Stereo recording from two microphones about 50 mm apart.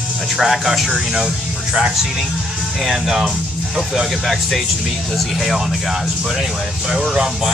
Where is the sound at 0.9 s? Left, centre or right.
Centre.